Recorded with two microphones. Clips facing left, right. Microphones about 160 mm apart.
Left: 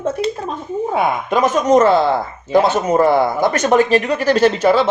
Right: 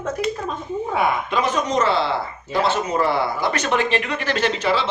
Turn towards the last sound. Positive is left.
turn(degrees=45)  # may be behind; listen again after turning